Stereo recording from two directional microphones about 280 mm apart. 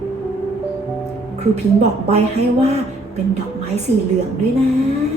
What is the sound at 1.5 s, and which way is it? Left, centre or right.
Speech, right.